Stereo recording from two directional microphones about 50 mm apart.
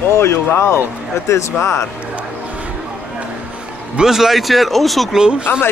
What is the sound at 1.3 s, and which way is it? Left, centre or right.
Speech, left.